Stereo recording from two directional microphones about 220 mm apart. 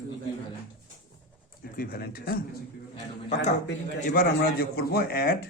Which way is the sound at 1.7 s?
40° left (ahead or behind).